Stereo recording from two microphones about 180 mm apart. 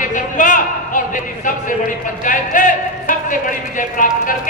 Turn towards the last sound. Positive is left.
turn(degrees=45)  # may be behind; listen again after turning